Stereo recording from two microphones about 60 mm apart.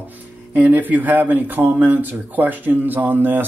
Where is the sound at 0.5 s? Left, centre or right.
Right.